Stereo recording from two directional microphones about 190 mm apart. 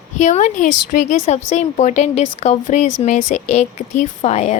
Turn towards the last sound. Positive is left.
turn(degrees=35)  # may be behind; listen again after turning